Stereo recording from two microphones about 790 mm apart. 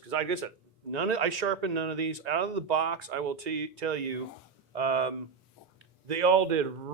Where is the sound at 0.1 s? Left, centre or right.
Right.